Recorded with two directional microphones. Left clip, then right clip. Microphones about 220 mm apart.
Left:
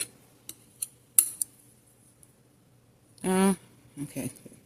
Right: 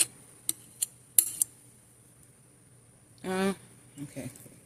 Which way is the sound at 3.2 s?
35° left (ahead or behind).